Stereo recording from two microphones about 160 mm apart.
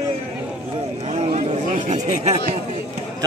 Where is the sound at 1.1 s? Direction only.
40° right (ahead or behind).